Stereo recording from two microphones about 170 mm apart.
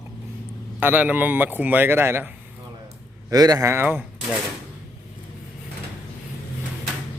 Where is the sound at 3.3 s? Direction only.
20° right (ahead or behind).